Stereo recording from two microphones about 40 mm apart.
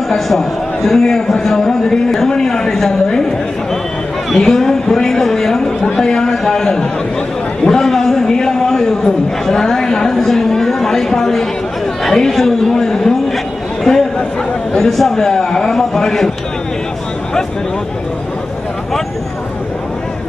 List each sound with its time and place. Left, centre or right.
0.1 s a man's voice: centre
4.4 s a man's voice: centre